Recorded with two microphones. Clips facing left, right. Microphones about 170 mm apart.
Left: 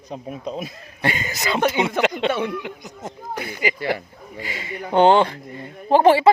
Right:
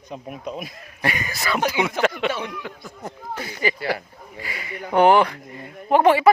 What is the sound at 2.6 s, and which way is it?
Speech, 20° left (ahead or behind).